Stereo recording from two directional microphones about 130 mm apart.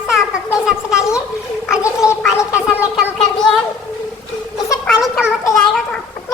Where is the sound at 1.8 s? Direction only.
25° left (ahead or behind).